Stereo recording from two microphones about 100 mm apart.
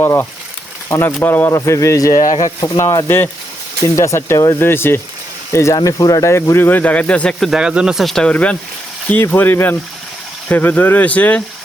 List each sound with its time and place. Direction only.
0.0 s speech: 25° left (ahead or behind); by 7.5 s 5° left (ahead or behind)
7.5 s speech: 10° right (ahead or behind); by 11.4 s 15° left (ahead or behind)